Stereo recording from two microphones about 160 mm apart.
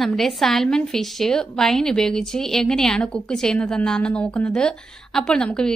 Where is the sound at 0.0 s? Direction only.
Centre (ahead or behind).